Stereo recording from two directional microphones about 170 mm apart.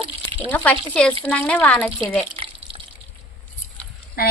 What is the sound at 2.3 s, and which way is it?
Water, 30° right (ahead or behind).